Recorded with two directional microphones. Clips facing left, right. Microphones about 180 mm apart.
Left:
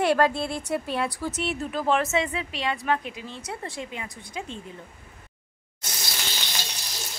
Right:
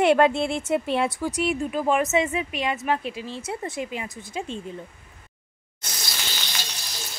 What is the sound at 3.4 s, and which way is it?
Speech, 20° right (ahead or behind).